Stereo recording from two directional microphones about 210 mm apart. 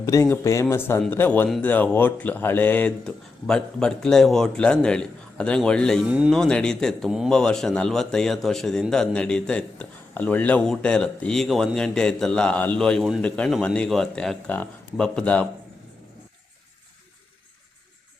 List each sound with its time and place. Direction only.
0.0 s speech: 15° left (ahead or behind)